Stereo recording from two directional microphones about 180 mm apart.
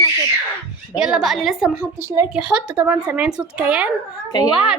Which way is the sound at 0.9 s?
Centre (ahead or behind).